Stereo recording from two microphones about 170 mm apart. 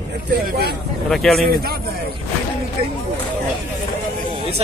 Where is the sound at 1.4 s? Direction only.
65° right (ahead or behind).